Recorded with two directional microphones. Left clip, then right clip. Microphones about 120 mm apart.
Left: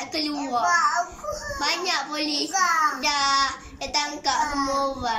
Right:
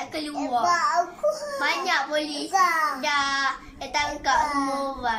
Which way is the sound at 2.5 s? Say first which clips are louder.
Right 1 dB; 40° right (ahead or behind).